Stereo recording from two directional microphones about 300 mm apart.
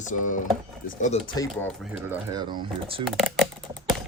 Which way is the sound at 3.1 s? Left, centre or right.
Centre.